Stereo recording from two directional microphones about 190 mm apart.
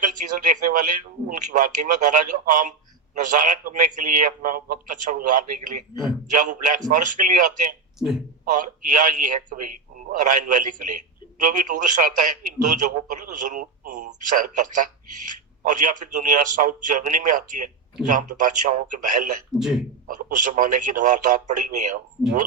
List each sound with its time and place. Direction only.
0.0 s speech: 45° right (ahead or behind)
7.9 s speech: centre (ahead or behind)
8.5 s speech: 45° right (ahead or behind)
19.5 s speech: centre (ahead or behind)
20.1 s speech: 45° right (ahead or behind)